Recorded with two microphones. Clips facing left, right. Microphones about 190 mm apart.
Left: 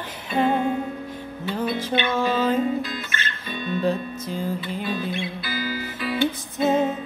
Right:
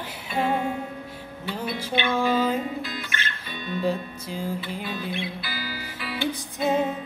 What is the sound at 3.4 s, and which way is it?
Music, 50° left (ahead or behind).